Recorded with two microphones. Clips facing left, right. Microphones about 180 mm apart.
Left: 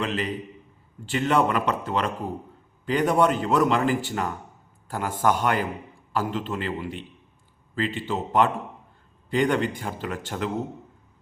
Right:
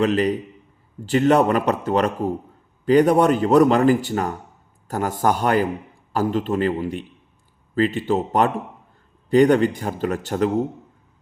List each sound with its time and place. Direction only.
0.0 s a man's voice: 40° right (ahead or behind)